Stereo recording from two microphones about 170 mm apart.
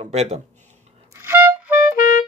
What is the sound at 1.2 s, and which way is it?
Music, 15° right (ahead or behind).